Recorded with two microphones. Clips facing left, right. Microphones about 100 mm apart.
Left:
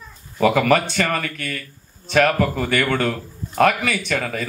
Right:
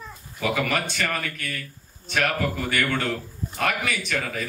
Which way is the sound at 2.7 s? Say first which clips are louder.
Left 5 dB; 70° left (ahead or behind).